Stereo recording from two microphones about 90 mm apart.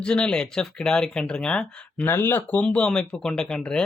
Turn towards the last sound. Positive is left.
turn(degrees=10)  # may be behind; listen again after turning